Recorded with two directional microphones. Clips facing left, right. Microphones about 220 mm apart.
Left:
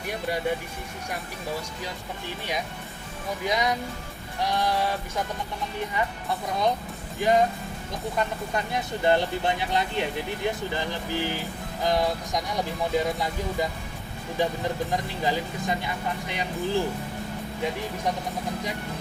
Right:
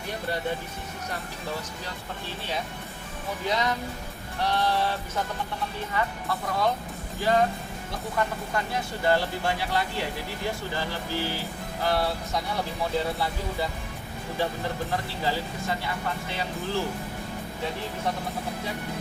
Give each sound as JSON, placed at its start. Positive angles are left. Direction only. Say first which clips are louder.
{"t": 0.1, "sound": "speech", "louder": "left 2 dB", "side_deg": 10}
{"t": 3.4, "sound": "speech", "louder": "left 1 dB", "side_deg": 15}
{"t": 8.5, "sound": "speech", "louder": "left 1 dB", "side_deg": 20}
{"t": 14.8, "sound": "speech", "louder": "left 2 dB", "side_deg": 15}